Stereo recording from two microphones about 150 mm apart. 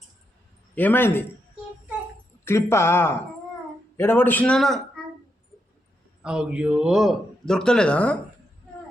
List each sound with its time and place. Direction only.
0.8 s a man's voice: 15° left (ahead or behind)
2.4 s a man's voice: 15° left (ahead or behind)
6.2 s a man's voice: 5° right (ahead or behind)